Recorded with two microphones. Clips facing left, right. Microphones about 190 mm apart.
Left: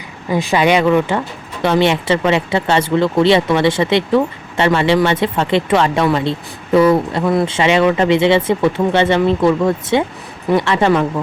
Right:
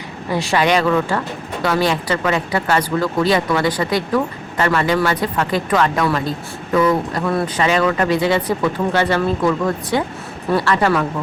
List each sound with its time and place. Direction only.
0.3 s speech: 10° left (ahead or behind)